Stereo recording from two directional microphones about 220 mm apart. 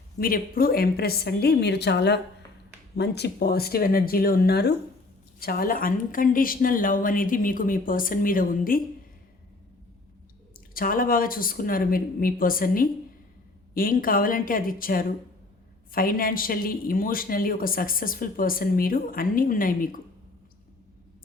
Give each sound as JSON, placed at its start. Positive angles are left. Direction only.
{"t": 0.2, "sound": "a woman's voice", "side_deg": 40}
{"t": 10.5, "sound": "speech", "side_deg": 40}